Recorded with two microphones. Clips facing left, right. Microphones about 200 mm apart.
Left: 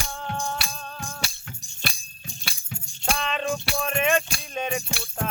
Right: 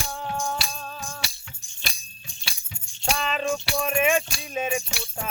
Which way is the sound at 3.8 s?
5° right (ahead or behind).